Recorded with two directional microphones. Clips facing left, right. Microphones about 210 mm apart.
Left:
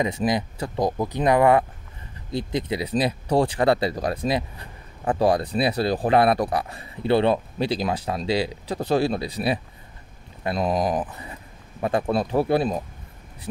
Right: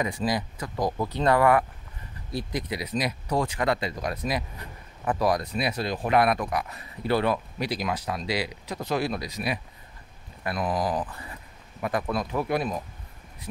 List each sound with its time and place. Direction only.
0.0 s speech: 20° left (ahead or behind)